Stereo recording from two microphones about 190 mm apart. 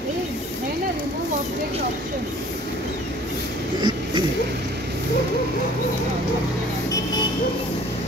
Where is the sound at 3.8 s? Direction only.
20° right (ahead or behind).